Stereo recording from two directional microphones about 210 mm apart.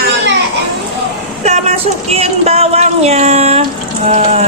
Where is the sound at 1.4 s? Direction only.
30° right (ahead or behind).